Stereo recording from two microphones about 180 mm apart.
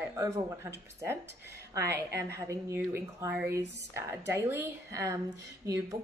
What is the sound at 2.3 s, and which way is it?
A woman's voice, 15° right (ahead or behind).